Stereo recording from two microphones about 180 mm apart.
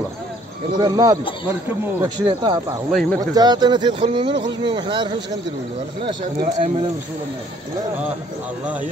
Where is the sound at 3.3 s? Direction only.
25° right (ahead or behind).